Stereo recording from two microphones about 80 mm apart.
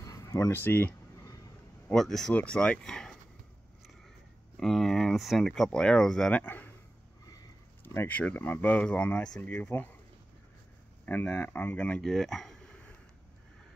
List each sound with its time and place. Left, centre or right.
0.0 s a sound: left
0.5 s speech: left
1.9 s speech: centre
4.6 s speech: centre
6.4 s speech: left
7.8 s a sound: left
8.1 s speech: centre
11.1 s speech: left
12.0 s speech: centre
12.6 s a sound: centre